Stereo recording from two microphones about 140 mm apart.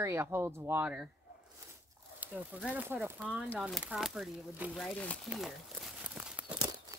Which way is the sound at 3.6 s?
Centre (ahead or behind).